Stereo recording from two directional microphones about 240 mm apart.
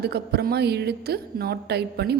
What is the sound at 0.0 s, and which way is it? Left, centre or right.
A woman's voice, right.